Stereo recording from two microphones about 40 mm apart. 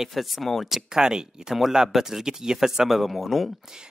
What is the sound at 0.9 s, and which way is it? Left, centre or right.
Speech, centre.